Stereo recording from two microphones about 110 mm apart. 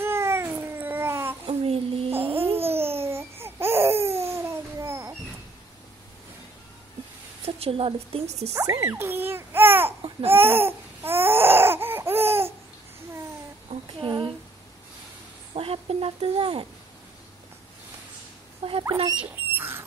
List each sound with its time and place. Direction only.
0.0 s babbling: 25° right (ahead or behind)
1.5 s child singing: 70° right (ahead or behind)
2.2 s babbling: 60° right (ahead or behind)
2.5 s babbling: 20° right (ahead or behind)
7.4 s a woman's voice: 65° right (ahead or behind)
8.5 s babbling: 30° right (ahead or behind)
10.3 s baby cry: 20° right (ahead or behind)
13.7 s child singing: 55° right (ahead or behind)
15.5 s a sound: 60° right (ahead or behind)
18.6 s rodents: 55° right (ahead or behind)
19.1 s rodents: 20° right (ahead or behind)